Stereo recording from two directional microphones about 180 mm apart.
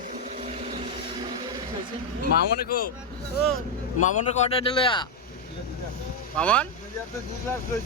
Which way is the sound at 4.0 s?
40° left (ahead or behind).